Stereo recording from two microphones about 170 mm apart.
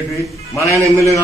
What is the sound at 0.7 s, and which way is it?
Speech, 15° right (ahead or behind).